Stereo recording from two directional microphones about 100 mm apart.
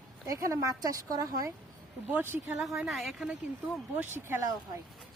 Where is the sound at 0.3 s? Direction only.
35° right (ahead or behind).